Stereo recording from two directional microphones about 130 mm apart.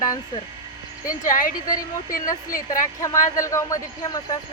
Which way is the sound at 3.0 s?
25° left (ahead or behind).